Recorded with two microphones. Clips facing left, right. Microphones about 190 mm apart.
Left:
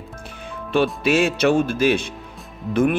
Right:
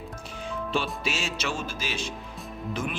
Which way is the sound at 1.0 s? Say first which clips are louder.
Left 14 dB; 60° left (ahead or behind).